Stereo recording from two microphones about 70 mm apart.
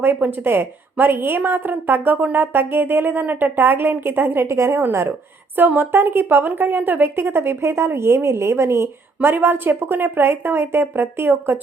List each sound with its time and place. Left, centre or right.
0.0 s a sound: right
4.4 s a woman's voice: right
5.5 s a woman's voice: right